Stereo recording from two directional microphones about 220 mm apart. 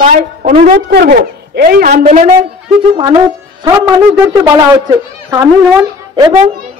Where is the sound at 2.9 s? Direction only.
20° right (ahead or behind).